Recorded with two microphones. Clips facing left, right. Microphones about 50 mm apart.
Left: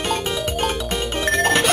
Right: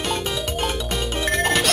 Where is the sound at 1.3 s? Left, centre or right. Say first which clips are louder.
Left 3 dB; centre.